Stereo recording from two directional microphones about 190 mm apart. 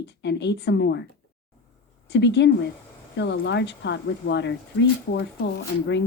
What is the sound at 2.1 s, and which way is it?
Speech, 65° left (ahead or behind).